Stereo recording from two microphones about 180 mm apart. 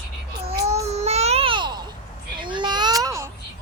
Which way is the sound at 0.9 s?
35° right (ahead or behind).